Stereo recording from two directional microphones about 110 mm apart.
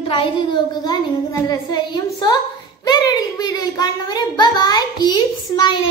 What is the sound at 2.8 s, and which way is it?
A child's voice, 35° left (ahead or behind).